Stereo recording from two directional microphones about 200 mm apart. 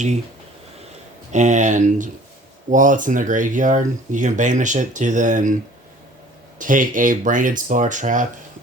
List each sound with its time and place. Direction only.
1.3 s speech: 35° right (ahead or behind)
6.6 s speech: 40° right (ahead or behind)